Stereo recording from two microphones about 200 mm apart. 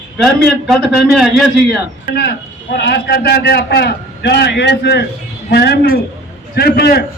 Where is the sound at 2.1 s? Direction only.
55° left (ahead or behind).